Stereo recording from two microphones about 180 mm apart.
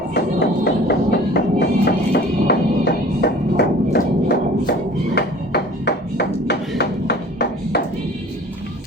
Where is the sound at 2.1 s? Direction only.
65° left (ahead or behind).